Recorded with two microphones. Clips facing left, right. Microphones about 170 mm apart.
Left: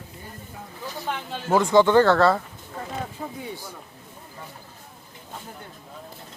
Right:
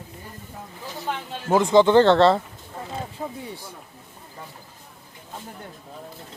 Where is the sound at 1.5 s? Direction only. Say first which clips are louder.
Right 1 dB; 20° right (ahead or behind).